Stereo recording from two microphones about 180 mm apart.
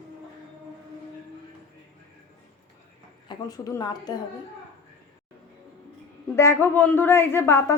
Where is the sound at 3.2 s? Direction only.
20° left (ahead or behind).